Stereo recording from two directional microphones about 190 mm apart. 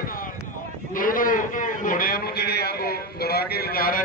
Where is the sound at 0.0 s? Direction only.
45° left (ahead or behind).